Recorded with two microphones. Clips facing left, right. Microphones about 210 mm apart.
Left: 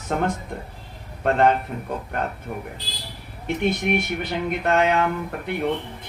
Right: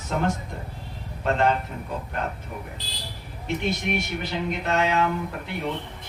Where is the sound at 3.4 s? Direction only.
55° left (ahead or behind).